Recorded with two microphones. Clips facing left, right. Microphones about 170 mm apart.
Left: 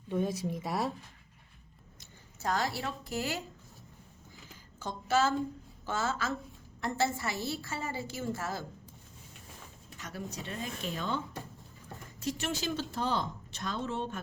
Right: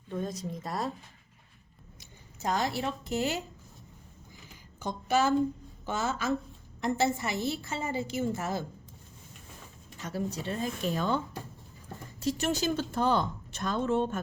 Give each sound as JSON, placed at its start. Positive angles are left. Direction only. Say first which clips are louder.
{"t": 0.1, "sound": "speech", "louder": "left 3 dB", "side_deg": 5}
{"t": 2.0, "sound": "speech", "louder": "right 3 dB", "side_deg": -20}
{"t": 4.8, "sound": "a woman's voice", "louder": "right 2 dB", "side_deg": -15}
{"t": 10.0, "sound": "speech", "louder": "right 7 dB", "side_deg": -30}
{"t": 12.2, "sound": "speech", "louder": "right 5 dB", "side_deg": -35}